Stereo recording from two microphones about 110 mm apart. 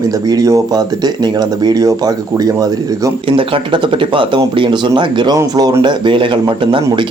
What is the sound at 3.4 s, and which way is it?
Speech, 50° right (ahead or behind).